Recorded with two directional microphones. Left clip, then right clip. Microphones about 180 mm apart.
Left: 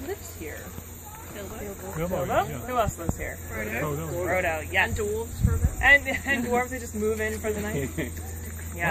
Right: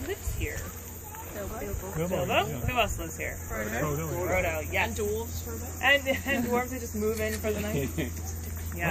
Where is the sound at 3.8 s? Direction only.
10° left (ahead or behind).